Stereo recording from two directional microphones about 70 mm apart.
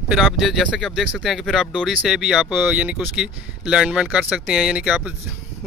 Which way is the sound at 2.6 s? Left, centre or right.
Centre.